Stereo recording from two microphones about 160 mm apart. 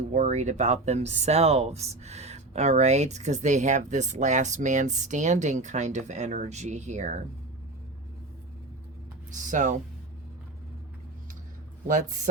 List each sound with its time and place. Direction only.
0.1 s speech: 50° right (ahead or behind)
9.5 s speech: 50° right (ahead or behind)
11.9 s speech: 55° right (ahead or behind)